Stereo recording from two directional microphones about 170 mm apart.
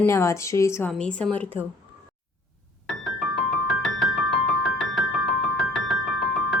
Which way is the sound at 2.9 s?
5° left (ahead or behind).